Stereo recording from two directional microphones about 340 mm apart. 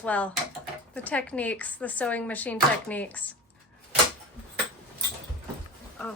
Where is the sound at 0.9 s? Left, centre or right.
Centre.